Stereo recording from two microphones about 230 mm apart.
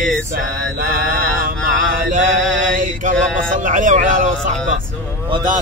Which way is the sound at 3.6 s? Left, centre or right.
Right.